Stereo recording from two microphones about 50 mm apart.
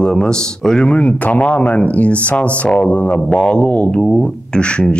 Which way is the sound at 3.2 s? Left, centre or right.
Centre.